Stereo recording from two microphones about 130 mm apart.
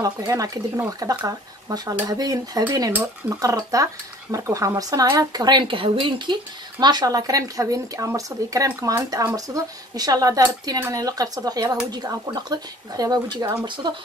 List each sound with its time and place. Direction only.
0.0 s speech: 25° right (ahead or behind)